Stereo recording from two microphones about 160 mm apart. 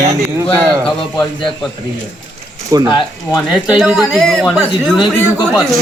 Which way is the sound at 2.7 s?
25° right (ahead or behind).